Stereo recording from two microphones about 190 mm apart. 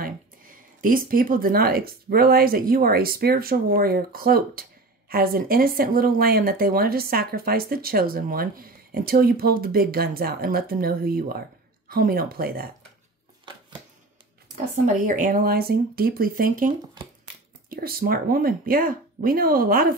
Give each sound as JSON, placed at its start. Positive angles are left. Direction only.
{"t": 0.0, "sound": "speech", "side_deg": -45}
{"t": 14.9, "sound": "speech", "side_deg": -45}